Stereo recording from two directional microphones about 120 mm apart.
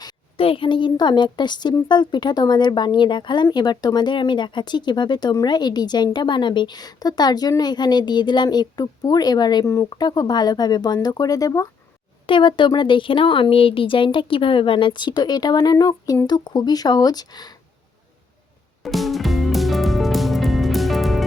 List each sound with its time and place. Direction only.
0.3 s a woman's voice: 50° left (ahead or behind); by 11.7 s 30° left (ahead or behind)
12.2 s a woman's voice: 45° left (ahead or behind)
18.8 s music: centre (ahead or behind)